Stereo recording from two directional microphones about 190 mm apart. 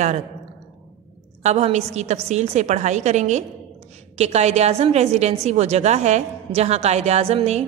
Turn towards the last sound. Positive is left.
turn(degrees=-35)  # may be behind; listen again after turning